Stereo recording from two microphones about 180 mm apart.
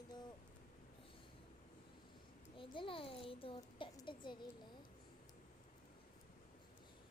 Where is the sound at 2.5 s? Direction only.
30° left (ahead or behind).